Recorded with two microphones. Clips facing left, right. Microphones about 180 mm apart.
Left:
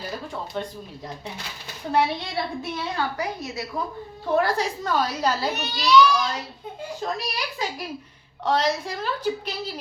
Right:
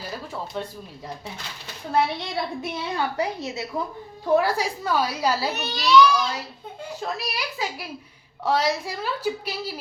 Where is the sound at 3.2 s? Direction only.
25° right (ahead or behind).